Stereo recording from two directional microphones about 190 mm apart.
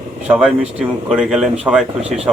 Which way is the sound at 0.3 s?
5° right (ahead or behind).